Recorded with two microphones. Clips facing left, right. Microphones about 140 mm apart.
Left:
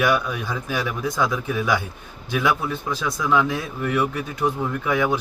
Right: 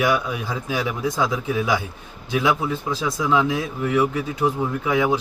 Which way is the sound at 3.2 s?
20° right (ahead or behind).